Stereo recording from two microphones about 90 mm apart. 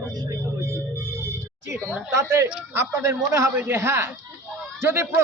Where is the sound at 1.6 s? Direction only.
35° right (ahead or behind).